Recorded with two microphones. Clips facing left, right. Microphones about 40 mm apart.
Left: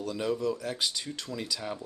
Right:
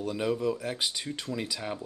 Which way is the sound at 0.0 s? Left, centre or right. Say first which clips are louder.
Right 1 dB; centre.